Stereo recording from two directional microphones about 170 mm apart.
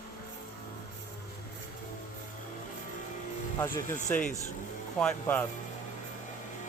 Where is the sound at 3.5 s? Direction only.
20° left (ahead or behind).